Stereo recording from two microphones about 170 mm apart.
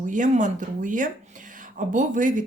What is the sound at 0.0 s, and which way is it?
Speech, 50° right (ahead or behind).